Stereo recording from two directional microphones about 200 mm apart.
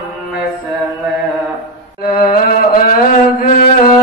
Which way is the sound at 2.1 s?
45° left (ahead or behind).